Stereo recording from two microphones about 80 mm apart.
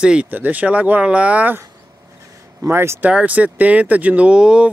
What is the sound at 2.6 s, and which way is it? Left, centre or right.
Speech, right.